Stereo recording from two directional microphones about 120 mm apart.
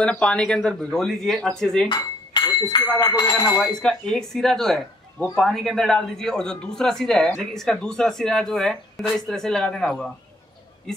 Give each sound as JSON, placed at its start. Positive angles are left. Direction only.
{"t": 0.0, "sound": "speech", "side_deg": 10}
{"t": 1.9, "sound": "speech", "side_deg": 35}
{"t": 3.8, "sound": "speech", "side_deg": 5}